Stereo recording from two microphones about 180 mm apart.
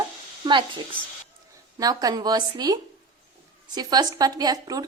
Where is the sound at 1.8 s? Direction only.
20° right (ahead or behind).